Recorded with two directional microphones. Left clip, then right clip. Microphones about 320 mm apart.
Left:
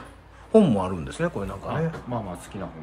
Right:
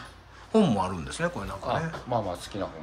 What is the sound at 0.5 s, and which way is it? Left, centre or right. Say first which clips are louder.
A man's voice: left 5 dB; centre.